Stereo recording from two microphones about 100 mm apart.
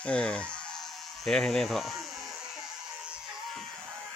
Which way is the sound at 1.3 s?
5° left (ahead or behind).